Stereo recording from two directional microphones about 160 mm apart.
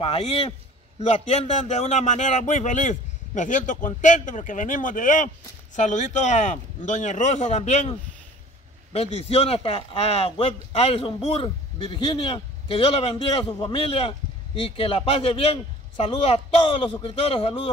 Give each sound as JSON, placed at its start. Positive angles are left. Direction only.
{"t": 0.0, "sound": "a man's voice", "side_deg": 35}
{"t": 8.9, "sound": "speech", "side_deg": 40}